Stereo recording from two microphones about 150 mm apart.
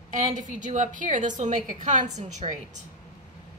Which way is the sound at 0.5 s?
55° right (ahead or behind).